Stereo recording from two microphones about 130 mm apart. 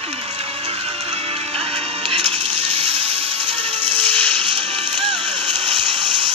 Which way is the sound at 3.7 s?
15° left (ahead or behind).